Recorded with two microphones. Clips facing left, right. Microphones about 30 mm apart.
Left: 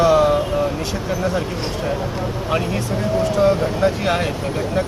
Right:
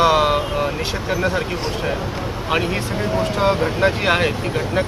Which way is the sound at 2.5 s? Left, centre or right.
Right.